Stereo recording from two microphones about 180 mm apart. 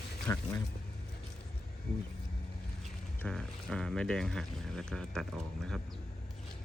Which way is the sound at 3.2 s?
5° left (ahead or behind).